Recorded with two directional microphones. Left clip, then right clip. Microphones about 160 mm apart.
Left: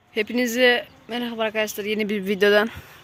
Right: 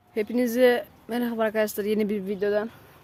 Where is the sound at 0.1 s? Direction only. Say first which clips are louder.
Left 2 dB; 15° right (ahead or behind); by 2.0 s 35° right (ahead or behind).